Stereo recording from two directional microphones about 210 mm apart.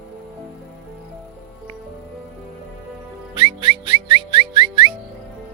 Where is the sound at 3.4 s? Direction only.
25° right (ahead or behind).